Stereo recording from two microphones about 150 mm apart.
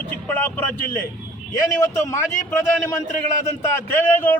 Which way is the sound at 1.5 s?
20° left (ahead or behind).